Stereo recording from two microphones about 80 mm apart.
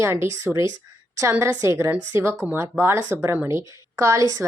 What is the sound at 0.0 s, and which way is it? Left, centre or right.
Speech, right.